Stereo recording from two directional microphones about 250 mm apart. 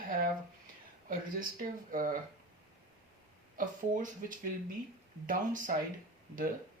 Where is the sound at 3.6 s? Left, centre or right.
Right.